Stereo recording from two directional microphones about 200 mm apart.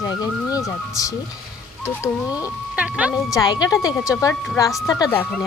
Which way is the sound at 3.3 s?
20° left (ahead or behind).